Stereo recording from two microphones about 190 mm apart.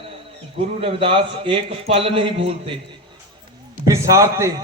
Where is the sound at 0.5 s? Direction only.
30° right (ahead or behind).